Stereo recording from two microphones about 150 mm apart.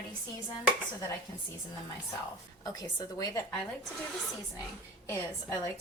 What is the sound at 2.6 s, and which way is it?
Speech, 25° left (ahead or behind).